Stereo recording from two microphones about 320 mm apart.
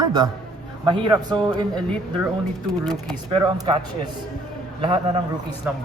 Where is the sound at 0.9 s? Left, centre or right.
Centre.